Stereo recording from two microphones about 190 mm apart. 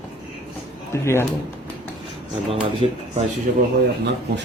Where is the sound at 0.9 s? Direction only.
15° left (ahead or behind).